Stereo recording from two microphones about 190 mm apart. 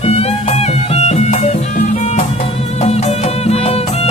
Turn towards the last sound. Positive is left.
turn(degrees=30)  # may be behind; listen again after turning